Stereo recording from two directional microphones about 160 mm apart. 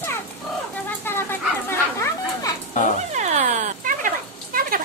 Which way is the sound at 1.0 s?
15° left (ahead or behind).